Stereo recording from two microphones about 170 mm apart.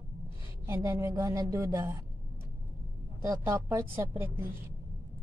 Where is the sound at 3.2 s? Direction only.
20° right (ahead or behind).